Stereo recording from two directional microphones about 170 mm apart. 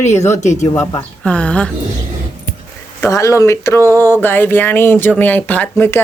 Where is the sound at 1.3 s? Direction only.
5° left (ahead or behind).